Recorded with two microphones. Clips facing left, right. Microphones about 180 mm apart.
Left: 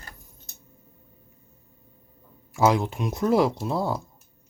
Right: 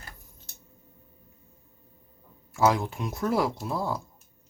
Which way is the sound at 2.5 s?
20° left (ahead or behind).